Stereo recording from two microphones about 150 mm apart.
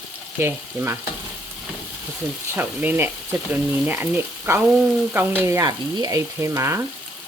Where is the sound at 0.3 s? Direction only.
15° right (ahead or behind).